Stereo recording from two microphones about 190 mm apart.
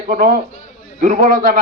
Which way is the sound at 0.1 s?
45° right (ahead or behind).